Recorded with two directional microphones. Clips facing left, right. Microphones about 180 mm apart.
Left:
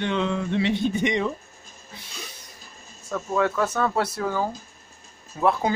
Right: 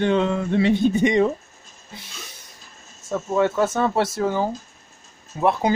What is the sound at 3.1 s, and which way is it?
Speech, 25° right (ahead or behind).